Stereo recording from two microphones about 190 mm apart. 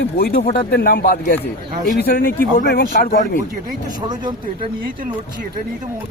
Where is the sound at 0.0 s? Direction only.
60° left (ahead or behind).